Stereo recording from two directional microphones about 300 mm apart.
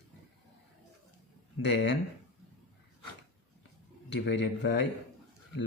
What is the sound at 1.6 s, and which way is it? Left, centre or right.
Speech, left.